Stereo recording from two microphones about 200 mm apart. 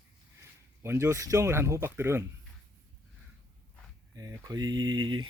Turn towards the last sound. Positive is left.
turn(degrees=-20)  # may be behind; listen again after turning